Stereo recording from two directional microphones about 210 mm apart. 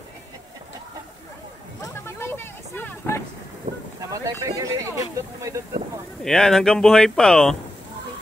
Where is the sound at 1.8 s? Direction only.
10° left (ahead or behind).